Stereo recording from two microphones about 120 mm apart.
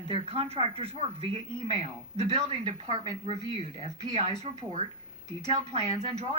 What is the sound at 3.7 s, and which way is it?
Speech, 60° right (ahead or behind).